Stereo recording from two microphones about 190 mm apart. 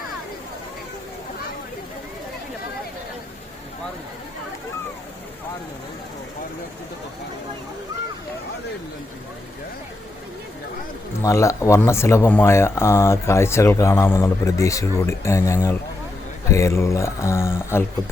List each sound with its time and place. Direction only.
11.2 s speech: 15° left (ahead or behind)